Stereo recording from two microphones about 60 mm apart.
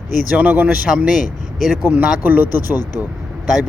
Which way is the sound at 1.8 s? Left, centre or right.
Right.